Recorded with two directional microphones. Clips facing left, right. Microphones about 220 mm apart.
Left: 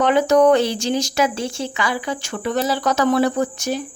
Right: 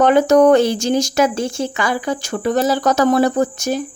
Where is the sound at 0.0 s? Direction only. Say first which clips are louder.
Right 3 dB; 45° right (ahead or behind).